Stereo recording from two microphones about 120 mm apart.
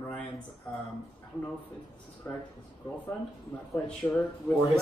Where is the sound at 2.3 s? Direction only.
20° left (ahead or behind).